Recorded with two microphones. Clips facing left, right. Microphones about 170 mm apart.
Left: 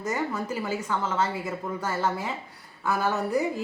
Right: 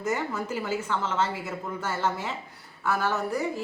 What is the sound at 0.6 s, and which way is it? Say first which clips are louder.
A woman's voice: even; 10° left (ahead or behind).